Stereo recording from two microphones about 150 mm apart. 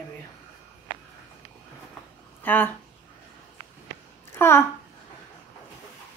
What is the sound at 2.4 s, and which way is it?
Speech, 10° left (ahead or behind).